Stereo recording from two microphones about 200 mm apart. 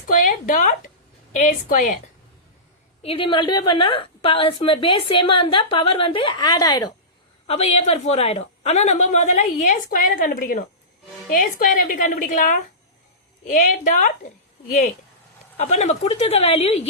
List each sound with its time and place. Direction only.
0.1 s a sound: 40° left (ahead or behind)
1.4 s a woman's voice: 40° left (ahead or behind)
3.0 s a woman's voice: 25° left (ahead or behind)
7.4 s a woman's voice: 30° left (ahead or behind)